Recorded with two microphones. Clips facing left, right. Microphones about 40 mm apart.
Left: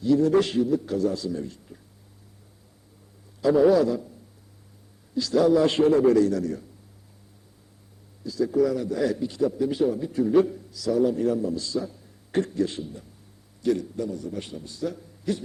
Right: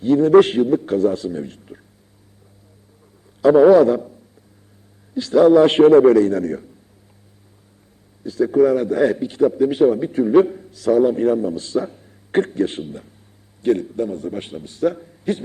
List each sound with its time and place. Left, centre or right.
0.0 s a man's voice: right
3.4 s a man's voice: right
5.1 s a man's voice: right
8.2 s a man's voice: right